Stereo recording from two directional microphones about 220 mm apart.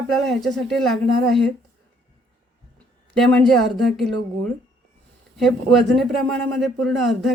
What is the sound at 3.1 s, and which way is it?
Speech, centre (ahead or behind).